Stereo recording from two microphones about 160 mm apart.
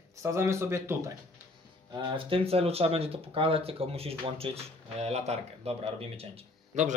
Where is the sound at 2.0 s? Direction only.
30° right (ahead or behind).